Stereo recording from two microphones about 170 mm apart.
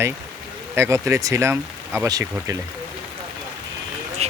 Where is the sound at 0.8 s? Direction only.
15° right (ahead or behind).